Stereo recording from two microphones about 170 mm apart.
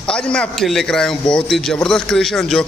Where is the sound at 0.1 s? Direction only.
5° left (ahead or behind).